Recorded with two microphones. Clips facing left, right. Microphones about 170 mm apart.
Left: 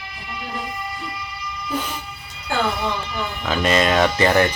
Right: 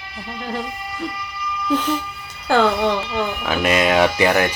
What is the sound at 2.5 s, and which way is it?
Speech, 90° right.